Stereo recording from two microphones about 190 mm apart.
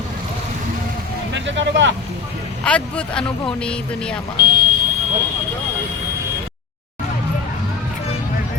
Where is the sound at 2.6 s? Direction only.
5° left (ahead or behind).